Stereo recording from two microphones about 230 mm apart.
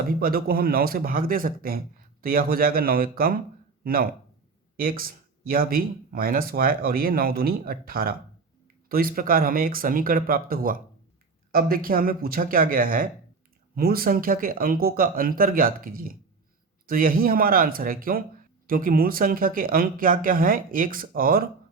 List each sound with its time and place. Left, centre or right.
0.1 s speech: right